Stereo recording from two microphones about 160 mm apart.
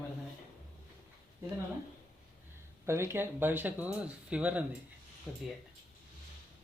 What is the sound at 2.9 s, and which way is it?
Speech, 15° right (ahead or behind).